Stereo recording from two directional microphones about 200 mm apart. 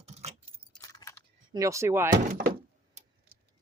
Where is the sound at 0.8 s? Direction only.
15° left (ahead or behind).